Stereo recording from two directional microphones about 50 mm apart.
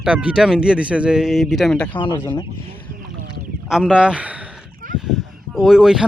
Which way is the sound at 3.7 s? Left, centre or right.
Centre.